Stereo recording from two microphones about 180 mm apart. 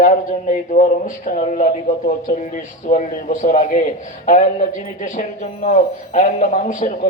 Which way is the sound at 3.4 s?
45° left (ahead or behind).